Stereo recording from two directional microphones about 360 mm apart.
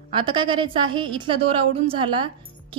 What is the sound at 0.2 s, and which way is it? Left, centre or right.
A woman's voice, centre.